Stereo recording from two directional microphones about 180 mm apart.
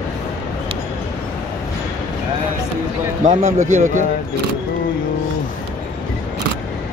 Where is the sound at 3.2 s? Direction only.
40° right (ahead or behind).